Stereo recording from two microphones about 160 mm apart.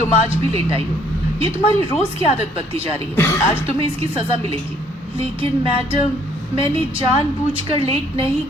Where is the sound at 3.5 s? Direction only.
35° right (ahead or behind).